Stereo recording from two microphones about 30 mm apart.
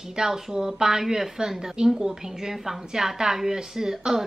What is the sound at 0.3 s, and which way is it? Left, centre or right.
Speech, centre.